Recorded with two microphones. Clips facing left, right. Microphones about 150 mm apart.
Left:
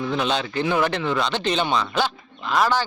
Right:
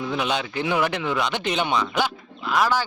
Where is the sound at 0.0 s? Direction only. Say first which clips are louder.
Left 2 dB; 10° right (ahead or behind).